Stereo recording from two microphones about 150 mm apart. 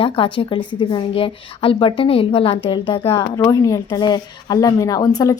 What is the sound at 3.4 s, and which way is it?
Speech, 20° left (ahead or behind).